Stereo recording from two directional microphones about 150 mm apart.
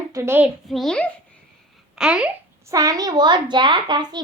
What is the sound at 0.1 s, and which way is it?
Speech, 20° right (ahead or behind).